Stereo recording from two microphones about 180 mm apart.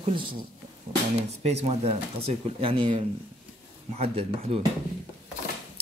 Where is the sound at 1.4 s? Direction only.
35° right (ahead or behind).